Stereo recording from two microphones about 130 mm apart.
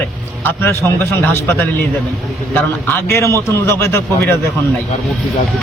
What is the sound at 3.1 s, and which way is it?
A man's voice, 20° left (ahead or behind).